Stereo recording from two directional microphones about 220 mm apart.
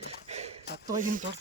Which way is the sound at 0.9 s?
35° right (ahead or behind).